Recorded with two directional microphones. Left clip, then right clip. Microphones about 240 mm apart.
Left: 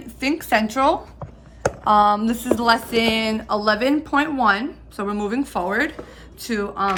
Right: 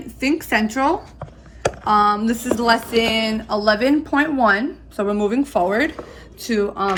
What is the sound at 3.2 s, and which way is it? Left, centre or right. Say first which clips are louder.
A woman's voice: right 2 dB; left.